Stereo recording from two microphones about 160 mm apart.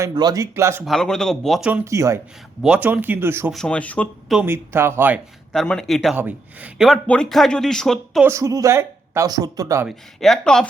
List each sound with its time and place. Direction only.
0.0 s speech: 25° right (ahead or behind)
0.9 s speech: 5° left (ahead or behind)
1.7 s speech: 20° right (ahead or behind)
3.5 s speech: 5° left (ahead or behind)
4.4 s speech: 15° right (ahead or behind)
5.5 s speech: centre (ahead or behind)
6.1 s speech: 10° right (ahead or behind)
8.2 s speech: 20° right (ahead or behind)
9.8 s speech: centre (ahead or behind)